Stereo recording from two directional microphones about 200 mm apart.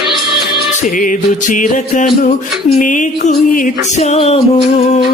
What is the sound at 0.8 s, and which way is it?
Music, 40° left (ahead or behind).